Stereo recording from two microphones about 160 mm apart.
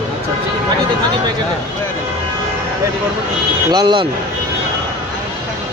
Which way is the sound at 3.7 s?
25° right (ahead or behind).